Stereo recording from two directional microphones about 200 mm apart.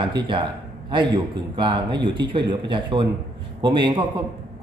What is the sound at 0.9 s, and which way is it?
Speech, 25° right (ahead or behind).